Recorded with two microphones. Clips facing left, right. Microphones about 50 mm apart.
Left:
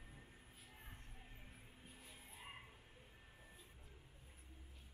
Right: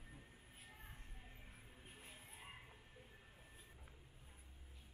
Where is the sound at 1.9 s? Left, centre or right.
Right.